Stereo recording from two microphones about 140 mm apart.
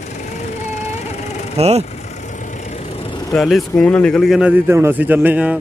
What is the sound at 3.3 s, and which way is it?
A man's voice, centre (ahead or behind).